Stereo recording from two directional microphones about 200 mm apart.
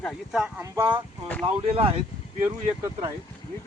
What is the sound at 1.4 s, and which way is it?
Speech, 30° right (ahead or behind).